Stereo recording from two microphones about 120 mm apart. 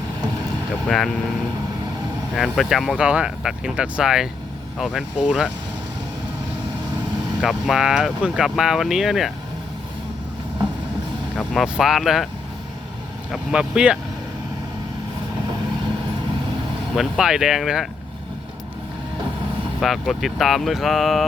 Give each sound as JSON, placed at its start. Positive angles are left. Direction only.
{"t": 0.9, "sound": "speech", "side_deg": 0}
{"t": 2.3, "sound": "speech", "side_deg": 0}
{"t": 7.4, "sound": "speech", "side_deg": -5}
{"t": 11.3, "sound": "speech", "side_deg": 0}
{"t": 13.3, "sound": "speech", "side_deg": -5}
{"t": 16.9, "sound": "speech", "side_deg": -5}
{"t": 19.8, "sound": "speech", "side_deg": 0}